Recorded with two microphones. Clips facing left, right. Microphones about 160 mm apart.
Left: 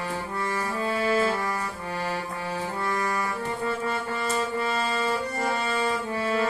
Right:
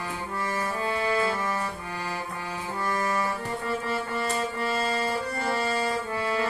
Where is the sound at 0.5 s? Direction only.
25° right (ahead or behind).